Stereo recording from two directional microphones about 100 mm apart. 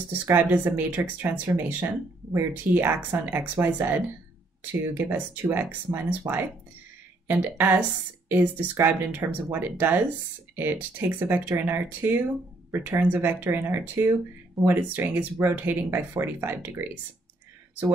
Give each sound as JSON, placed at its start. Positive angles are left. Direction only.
{"t": 0.2, "sound": "speech", "side_deg": -15}